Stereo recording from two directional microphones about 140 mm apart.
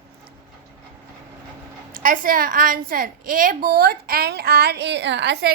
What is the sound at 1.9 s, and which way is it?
A woman's voice, 75° right (ahead or behind).